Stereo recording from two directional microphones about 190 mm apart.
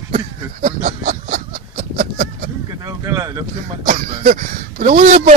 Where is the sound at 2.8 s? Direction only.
20° right (ahead or behind).